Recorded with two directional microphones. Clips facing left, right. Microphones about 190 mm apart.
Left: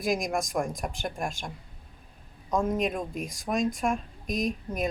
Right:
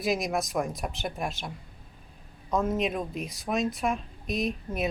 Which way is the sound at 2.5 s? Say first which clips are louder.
Even; centre (ahead or behind).